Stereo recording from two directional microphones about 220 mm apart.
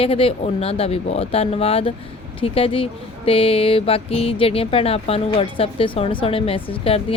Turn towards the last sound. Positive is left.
turn(degrees=25)  # may be behind; listen again after turning